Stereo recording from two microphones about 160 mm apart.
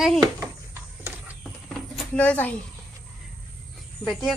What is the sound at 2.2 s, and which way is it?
Speech, 10° left (ahead or behind).